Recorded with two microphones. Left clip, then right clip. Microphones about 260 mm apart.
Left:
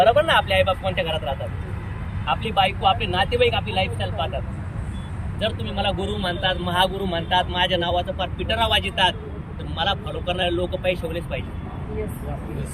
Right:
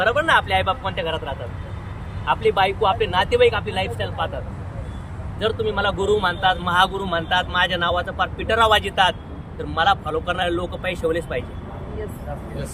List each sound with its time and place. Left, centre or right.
0.0 s speech: centre
2.6 s speech: centre
5.4 s speech: centre